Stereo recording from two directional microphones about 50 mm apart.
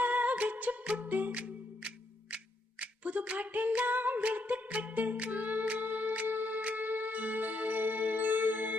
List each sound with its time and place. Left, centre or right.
0.0 s music: right
2.3 s a sound: right
3.9 s music: right